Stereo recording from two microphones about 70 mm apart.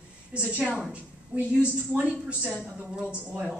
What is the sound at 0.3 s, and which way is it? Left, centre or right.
A woman's voice, centre.